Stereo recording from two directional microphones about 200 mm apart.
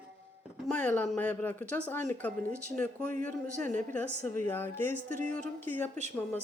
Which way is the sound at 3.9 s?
10° left (ahead or behind).